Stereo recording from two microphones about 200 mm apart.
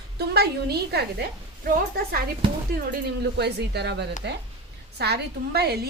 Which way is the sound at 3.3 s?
55° right (ahead or behind).